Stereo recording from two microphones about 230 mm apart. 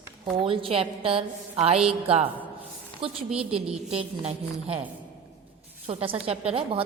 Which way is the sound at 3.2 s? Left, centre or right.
Centre.